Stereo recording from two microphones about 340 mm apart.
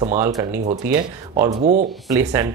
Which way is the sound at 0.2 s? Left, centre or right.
Centre.